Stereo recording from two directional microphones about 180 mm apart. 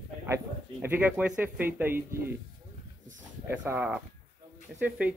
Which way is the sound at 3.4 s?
10° right (ahead or behind).